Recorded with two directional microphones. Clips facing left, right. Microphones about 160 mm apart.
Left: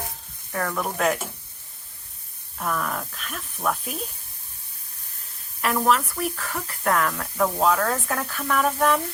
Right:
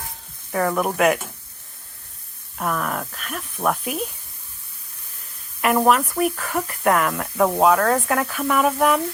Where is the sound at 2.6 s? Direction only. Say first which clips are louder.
Right 3 dB; 10° right (ahead or behind).